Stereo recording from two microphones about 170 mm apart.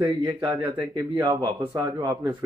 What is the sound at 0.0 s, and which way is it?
Speech, 25° right (ahead or behind).